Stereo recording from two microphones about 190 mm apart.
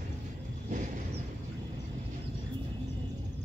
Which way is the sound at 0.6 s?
40° right (ahead or behind).